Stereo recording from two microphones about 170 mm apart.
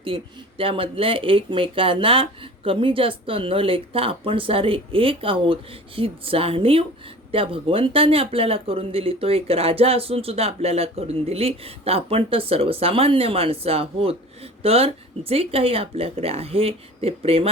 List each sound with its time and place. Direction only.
0.0 s speech: 30° right (ahead or behind)